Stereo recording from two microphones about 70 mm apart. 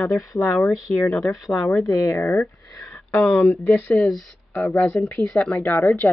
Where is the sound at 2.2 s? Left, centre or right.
Left.